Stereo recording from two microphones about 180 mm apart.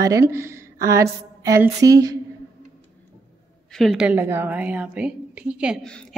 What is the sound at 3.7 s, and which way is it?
A woman's voice, centre (ahead or behind).